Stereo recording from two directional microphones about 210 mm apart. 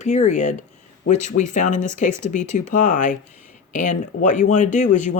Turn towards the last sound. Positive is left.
turn(degrees=35)  # may be behind; listen again after turning